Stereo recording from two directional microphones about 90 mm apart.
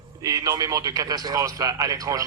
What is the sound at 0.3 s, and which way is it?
A man's voice, 40° right (ahead or behind).